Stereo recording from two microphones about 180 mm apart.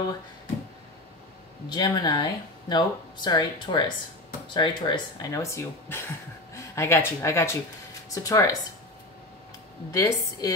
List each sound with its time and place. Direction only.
1.7 s speech: 25° left (ahead or behind)
9.9 s speech: 20° left (ahead or behind)